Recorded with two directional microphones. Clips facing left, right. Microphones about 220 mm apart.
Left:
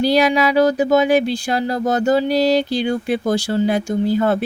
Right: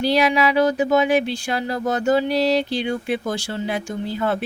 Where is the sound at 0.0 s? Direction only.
40° left (ahead or behind).